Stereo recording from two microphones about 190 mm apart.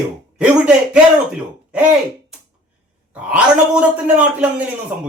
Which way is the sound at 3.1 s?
5° right (ahead or behind).